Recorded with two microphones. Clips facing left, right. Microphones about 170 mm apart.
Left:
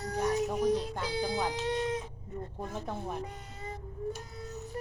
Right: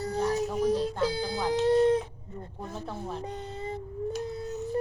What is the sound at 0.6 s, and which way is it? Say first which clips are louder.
Music: right 3 dB; 30° right (ahead or behind).